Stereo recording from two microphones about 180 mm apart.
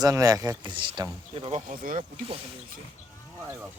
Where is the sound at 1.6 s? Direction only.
50° right (ahead or behind).